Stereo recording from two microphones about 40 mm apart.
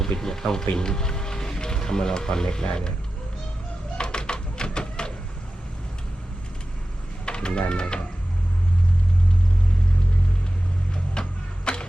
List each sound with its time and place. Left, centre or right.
0.0 s speech: centre
3.9 s flamenco: left
7.3 s speech: left
10.9 s music: left